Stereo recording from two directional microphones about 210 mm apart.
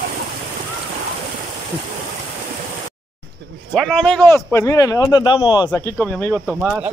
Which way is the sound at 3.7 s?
Centre (ahead or behind).